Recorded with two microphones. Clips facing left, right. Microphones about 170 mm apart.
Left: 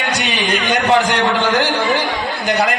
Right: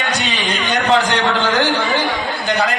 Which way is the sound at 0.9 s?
15° left (ahead or behind).